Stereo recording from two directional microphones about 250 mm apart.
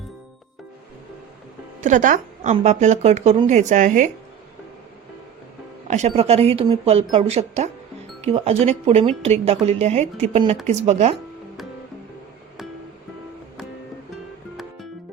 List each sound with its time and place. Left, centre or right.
1.8 s a woman's voice: right
5.9 s a woman's voice: right
14.5 s music: centre